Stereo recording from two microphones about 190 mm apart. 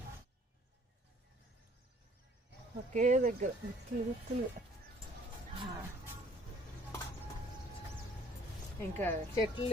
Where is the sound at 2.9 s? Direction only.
40° right (ahead or behind).